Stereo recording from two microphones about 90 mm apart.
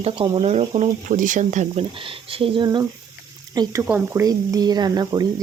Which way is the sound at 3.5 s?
50° right (ahead or behind).